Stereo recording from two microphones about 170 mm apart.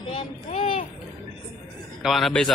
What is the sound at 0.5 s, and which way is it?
Speech, 35° left (ahead or behind).